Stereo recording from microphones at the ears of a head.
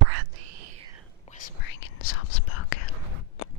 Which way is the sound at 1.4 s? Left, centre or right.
Left.